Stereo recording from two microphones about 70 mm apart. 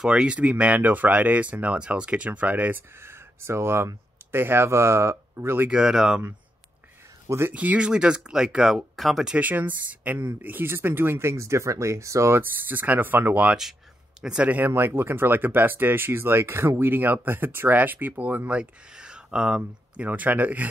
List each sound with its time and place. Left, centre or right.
0.0 s speech: centre
3.0 s speech: right
5.7 s speech: centre
7.2 s speech: right
7.5 s speech: centre
9.3 s speech: right
12.4 s speech: right
14.7 s speech: right
18.5 s speech: centre
20.1 s speech: right